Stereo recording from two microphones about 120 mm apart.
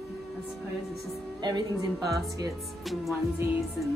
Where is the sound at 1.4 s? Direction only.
35° right (ahead or behind).